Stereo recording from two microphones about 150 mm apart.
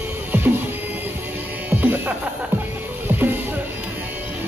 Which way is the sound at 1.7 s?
10° right (ahead or behind).